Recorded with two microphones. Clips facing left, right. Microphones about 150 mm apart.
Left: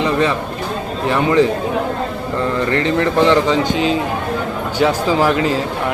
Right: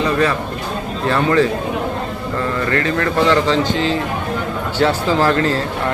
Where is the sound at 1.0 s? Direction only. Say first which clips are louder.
Left 1 dB; 15° left (ahead or behind).